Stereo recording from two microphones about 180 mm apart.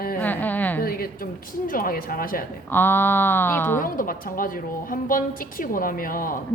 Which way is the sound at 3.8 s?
50° left (ahead or behind).